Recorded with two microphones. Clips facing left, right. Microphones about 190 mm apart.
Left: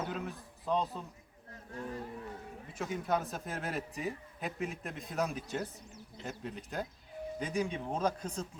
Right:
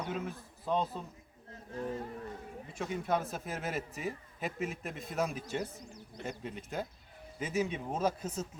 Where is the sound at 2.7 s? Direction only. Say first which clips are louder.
Even; centre (ahead or behind).